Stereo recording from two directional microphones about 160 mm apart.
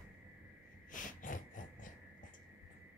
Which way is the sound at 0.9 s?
55° left (ahead or behind).